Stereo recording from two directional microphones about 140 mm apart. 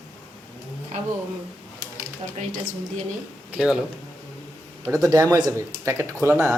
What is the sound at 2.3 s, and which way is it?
Speech, 55° right (ahead or behind).